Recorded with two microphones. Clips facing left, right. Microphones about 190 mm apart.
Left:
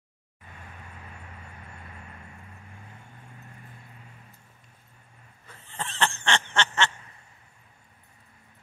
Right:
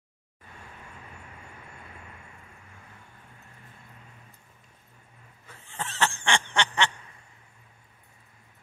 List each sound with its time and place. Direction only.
5.5 s snicker: 10° right (ahead or behind)